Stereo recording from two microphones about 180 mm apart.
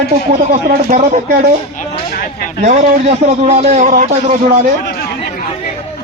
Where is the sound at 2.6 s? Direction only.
45° right (ahead or behind).